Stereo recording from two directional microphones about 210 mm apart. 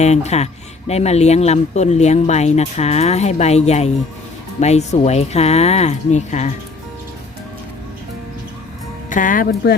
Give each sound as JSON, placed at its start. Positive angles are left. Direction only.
{"t": 0.0, "sound": "speech", "side_deg": 30}
{"t": 9.0, "sound": "speech", "side_deg": 40}